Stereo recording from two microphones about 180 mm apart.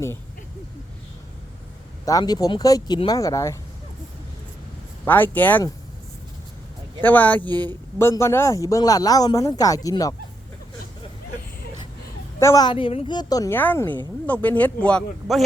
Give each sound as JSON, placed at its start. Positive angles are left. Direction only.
{"t": 2.0, "sound": "speech", "side_deg": 20}
{"t": 5.0, "sound": "speech", "side_deg": 10}
{"t": 7.0, "sound": "speech", "side_deg": 10}
{"t": 12.4, "sound": "speech", "side_deg": 20}